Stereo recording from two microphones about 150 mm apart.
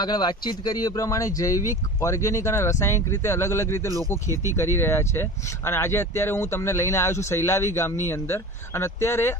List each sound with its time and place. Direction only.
0.0 s speech: 30° left (ahead or behind)